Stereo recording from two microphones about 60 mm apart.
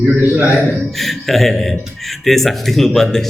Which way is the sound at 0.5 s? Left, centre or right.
Centre.